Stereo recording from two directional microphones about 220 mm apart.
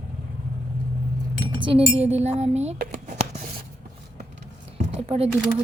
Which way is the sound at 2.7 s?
45° right (ahead or behind).